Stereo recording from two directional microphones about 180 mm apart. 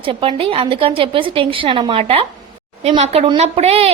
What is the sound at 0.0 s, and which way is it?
A woman's voice, 30° right (ahead or behind).